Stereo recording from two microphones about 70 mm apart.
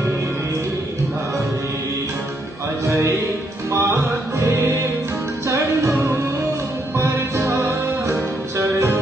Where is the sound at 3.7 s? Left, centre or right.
Right.